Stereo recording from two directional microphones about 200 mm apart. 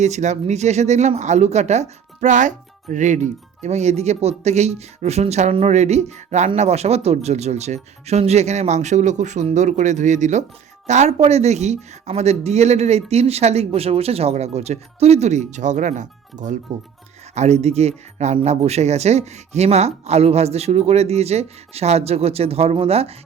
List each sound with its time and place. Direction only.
0.0 s speech: 35° right (ahead or behind)